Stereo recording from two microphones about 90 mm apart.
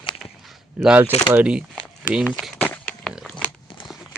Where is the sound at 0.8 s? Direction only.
10° right (ahead or behind).